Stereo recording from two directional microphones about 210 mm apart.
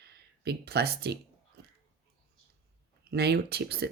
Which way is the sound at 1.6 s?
50° right (ahead or behind).